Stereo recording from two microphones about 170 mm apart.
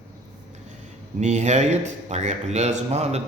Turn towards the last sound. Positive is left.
turn(degrees=-40)  # may be behind; listen again after turning